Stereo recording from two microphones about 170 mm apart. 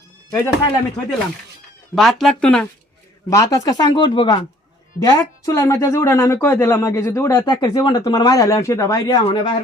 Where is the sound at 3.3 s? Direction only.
20° left (ahead or behind).